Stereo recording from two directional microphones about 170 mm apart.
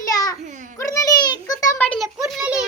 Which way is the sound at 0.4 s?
45° right (ahead or behind).